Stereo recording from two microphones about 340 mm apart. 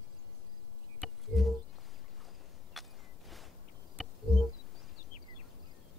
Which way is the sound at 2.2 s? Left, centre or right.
Centre.